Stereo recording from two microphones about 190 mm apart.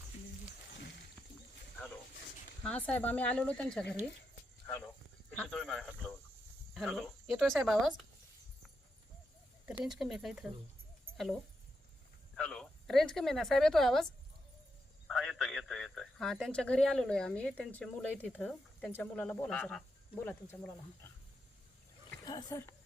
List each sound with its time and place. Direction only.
2.6 s speech: 10° left (ahead or behind)
9.6 s speech: centre (ahead or behind)
12.4 s speech: 5° left (ahead or behind)
22.3 s speech: 20° left (ahead or behind)